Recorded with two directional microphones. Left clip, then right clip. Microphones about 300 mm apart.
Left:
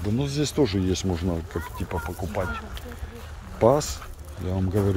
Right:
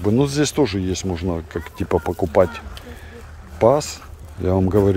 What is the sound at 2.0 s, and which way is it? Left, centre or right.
Speech, centre.